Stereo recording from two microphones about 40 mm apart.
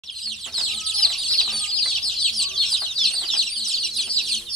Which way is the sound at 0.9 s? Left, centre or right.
Centre.